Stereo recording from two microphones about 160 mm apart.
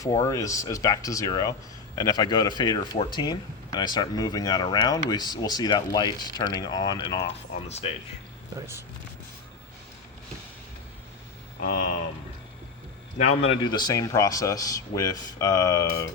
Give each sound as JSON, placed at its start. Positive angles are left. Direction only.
{"t": 0.0, "sound": "speech", "side_deg": 20}
{"t": 7.2, "sound": "speech", "side_deg": 40}
{"t": 8.5, "sound": "speech", "side_deg": -15}
{"t": 13.6, "sound": "speech", "side_deg": 25}